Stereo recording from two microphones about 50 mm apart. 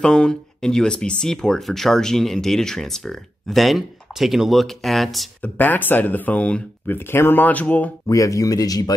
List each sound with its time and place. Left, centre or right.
0.0 s speech: centre
5.4 s speech: left
6.9 s speech: left
8.1 s speech: left